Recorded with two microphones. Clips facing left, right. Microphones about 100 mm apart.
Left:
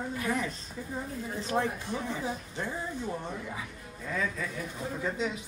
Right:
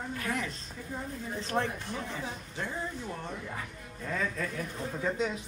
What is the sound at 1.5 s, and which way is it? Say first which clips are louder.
Speech: left 2 dB; centre (ahead or behind).